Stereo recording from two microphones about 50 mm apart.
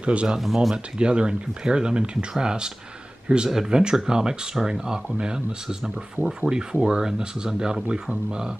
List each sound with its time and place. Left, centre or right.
0.0 s speech: right
0.4 s speech: centre
0.9 s speech: centre